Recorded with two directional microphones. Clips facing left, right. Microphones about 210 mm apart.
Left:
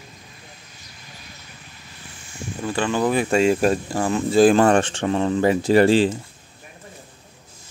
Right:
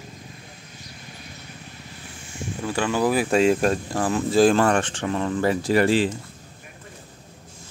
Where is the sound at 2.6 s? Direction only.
10° right (ahead or behind).